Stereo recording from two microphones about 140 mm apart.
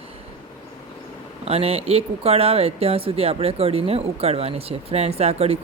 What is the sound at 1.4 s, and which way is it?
Speech, 45° right (ahead or behind).